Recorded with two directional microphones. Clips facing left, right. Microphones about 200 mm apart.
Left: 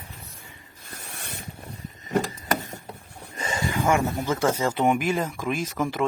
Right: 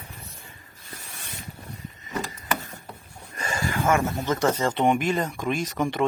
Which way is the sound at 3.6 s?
15° left (ahead or behind).